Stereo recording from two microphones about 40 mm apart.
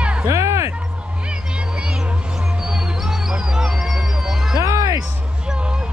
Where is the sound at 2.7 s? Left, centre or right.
Centre.